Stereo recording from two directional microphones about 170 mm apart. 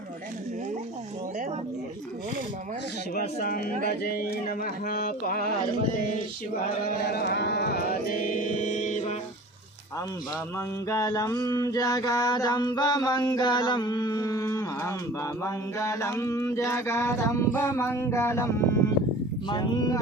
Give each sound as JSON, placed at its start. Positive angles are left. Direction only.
{"t": 3.2, "sound": "music", "side_deg": 60}
{"t": 7.0, "sound": "music", "side_deg": 70}
{"t": 10.8, "sound": "a sound", "side_deg": 20}